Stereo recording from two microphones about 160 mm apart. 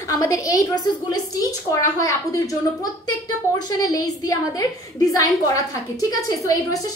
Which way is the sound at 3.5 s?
25° left (ahead or behind).